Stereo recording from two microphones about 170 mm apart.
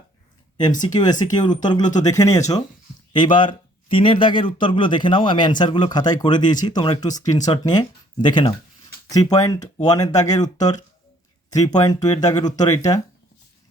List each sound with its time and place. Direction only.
0.8 s speech: 25° left (ahead or behind)